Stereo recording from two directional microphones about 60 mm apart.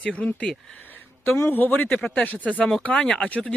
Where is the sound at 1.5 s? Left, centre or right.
Left.